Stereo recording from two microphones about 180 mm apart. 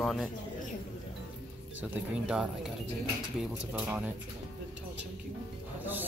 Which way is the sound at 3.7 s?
10° right (ahead or behind).